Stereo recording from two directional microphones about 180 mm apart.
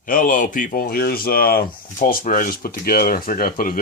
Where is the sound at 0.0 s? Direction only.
50° left (ahead or behind).